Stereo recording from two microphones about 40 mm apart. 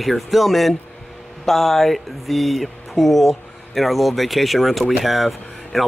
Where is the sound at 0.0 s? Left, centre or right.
Centre.